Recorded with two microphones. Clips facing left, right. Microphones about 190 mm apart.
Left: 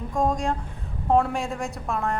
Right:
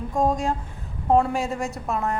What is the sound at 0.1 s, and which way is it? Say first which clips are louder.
Speech: right 1 dB; centre (ahead or behind).